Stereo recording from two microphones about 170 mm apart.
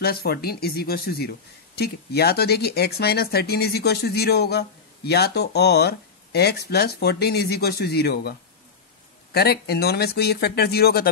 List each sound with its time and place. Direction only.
0.0 s speech: 65° left (ahead or behind)